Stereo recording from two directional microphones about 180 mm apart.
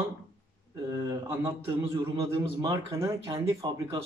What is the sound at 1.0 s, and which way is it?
A man's voice, 20° right (ahead or behind).